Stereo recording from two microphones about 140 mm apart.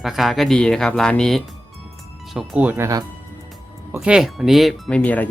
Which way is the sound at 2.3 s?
5° right (ahead or behind).